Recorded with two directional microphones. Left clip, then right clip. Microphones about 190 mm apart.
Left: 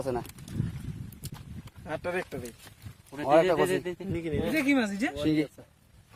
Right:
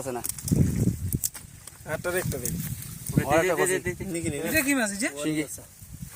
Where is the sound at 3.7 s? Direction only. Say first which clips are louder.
Right 2 dB; 35° left (ahead or behind).